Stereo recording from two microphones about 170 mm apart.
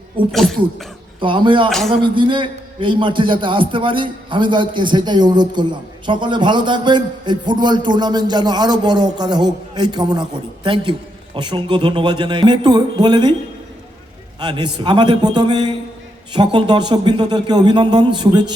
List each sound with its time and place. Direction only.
0.3 s speech: centre (ahead or behind)
1.2 s a man's voice: 30° right (ahead or behind)
14.3 s a man's voice: 25° right (ahead or behind)